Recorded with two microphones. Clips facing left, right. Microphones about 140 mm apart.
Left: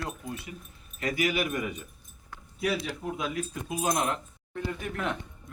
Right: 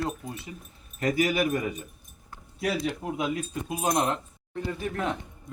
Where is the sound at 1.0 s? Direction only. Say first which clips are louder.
Right 4 dB; 40° right (ahead or behind).